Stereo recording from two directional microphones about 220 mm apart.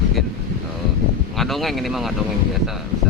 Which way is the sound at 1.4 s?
Centre (ahead or behind).